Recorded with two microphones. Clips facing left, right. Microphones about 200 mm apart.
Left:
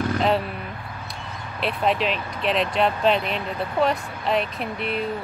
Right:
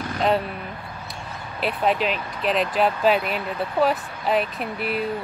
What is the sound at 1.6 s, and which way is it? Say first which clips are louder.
Speech: right 1 dB; centre (ahead or behind).